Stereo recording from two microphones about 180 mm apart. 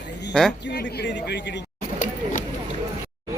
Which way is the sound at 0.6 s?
70° left (ahead or behind).